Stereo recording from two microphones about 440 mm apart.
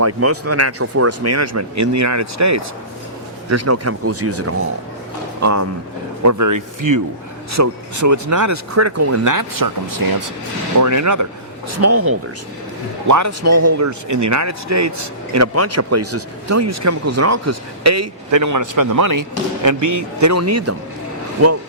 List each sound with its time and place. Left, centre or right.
0.0 s speech: right